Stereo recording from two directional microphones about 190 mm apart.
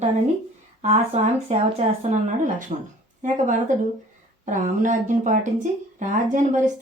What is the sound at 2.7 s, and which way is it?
Speech, 40° right (ahead or behind).